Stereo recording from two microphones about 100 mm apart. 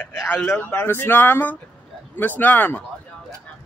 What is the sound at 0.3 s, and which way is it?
A man's voice, 20° left (ahead or behind).